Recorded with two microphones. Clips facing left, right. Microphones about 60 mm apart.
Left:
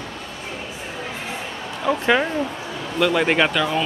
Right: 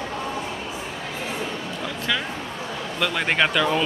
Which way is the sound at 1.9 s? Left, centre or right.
Left.